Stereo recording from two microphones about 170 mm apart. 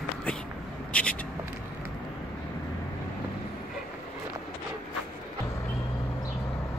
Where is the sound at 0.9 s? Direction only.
5° left (ahead or behind).